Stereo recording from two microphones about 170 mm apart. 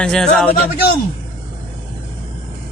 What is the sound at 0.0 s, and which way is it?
Speech, 5° left (ahead or behind).